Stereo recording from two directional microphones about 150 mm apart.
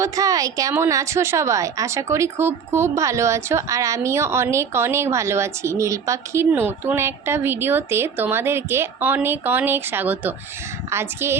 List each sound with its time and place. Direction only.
0.0 s a woman's voice: 25° right (ahead or behind)